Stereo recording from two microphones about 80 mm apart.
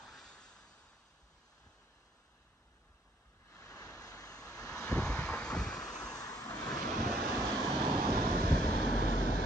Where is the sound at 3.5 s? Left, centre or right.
Left.